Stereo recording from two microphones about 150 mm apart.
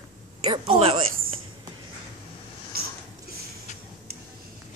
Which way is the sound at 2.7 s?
90° right.